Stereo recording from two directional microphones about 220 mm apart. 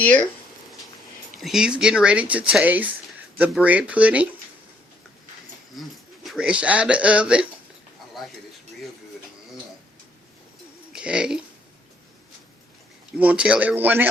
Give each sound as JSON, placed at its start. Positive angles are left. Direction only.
{"t": 0.0, "sound": "speech", "side_deg": 5}
{"t": 1.4, "sound": "speech", "side_deg": 0}
{"t": 5.8, "sound": "speech", "side_deg": 0}
{"t": 10.9, "sound": "speech", "side_deg": -5}
{"t": 13.1, "sound": "speech", "side_deg": -5}